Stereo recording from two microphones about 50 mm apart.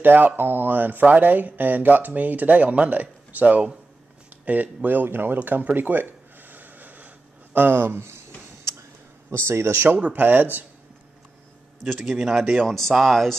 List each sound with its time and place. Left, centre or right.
0.0 s speech: right
9.5 s speech: right
9.9 s speech: right
11.8 s speech: centre
12.6 s speech: centre